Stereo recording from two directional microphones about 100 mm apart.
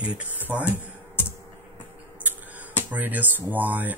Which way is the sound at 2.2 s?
15° right (ahead or behind).